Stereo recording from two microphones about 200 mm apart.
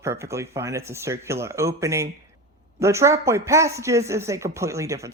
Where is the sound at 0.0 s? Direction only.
15° right (ahead or behind).